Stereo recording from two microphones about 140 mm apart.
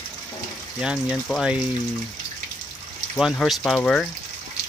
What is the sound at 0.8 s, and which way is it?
Speech, 5° right (ahead or behind).